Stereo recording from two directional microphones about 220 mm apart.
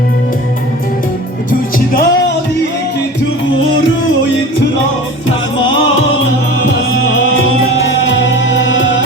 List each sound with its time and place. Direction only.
1.5 s music: 40° left (ahead or behind)
8.0 s music: 55° left (ahead or behind)